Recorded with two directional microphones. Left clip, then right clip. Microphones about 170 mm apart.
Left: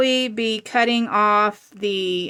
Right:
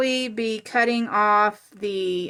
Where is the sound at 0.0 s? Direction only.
25° left (ahead or behind).